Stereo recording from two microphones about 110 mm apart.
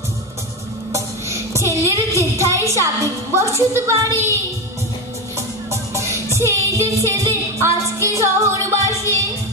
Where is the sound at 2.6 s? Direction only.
30° right (ahead or behind).